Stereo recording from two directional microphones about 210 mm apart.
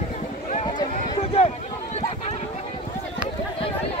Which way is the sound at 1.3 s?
30° left (ahead or behind).